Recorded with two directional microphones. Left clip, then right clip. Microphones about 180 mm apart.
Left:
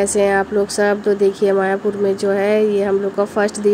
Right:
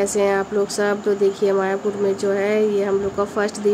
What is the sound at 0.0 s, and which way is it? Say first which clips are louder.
Speech: left 3 dB; 15° left (ahead or behind).